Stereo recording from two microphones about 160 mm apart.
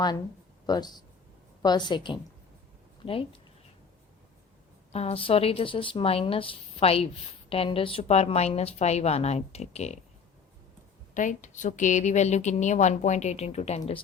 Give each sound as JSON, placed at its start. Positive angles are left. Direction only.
{"t": 0.7, "sound": "a woman's voice", "side_deg": 25}
{"t": 4.9, "sound": "a woman's voice", "side_deg": 40}
{"t": 11.1, "sound": "a woman's voice", "side_deg": 50}